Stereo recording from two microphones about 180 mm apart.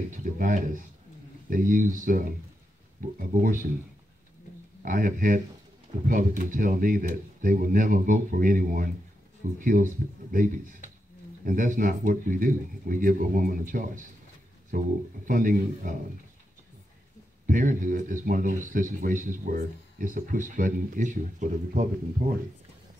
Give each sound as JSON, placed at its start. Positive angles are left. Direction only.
{"t": 0.1, "sound": "speech", "side_deg": -45}
{"t": 4.8, "sound": "speech", "side_deg": -50}
{"t": 17.5, "sound": "speech", "side_deg": -50}